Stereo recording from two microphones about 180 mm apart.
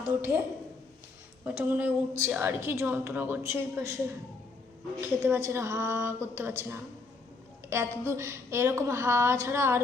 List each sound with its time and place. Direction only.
0.1 s a woman's voice: 15° right (ahead or behind)
1.5 s a woman's voice: 10° right (ahead or behind)
4.9 s a woman's voice: 15° right (ahead or behind)
8.0 s a woman's voice: 15° right (ahead or behind)